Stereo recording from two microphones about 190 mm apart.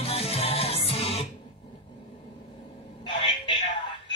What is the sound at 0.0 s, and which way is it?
Music, 35° left (ahead or behind).